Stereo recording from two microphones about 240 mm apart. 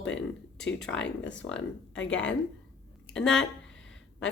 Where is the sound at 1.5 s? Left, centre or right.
Left.